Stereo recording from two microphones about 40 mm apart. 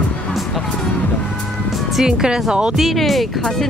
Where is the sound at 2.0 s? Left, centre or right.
Centre.